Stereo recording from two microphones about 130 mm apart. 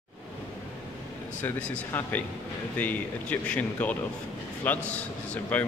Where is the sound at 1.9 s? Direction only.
15° left (ahead or behind).